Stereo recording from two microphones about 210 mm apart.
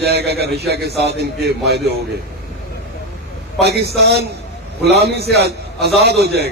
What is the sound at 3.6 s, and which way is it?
A man's voice, 50° right (ahead or behind).